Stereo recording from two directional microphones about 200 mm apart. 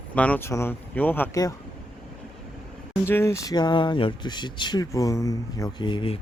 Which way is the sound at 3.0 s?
15° left (ahead or behind).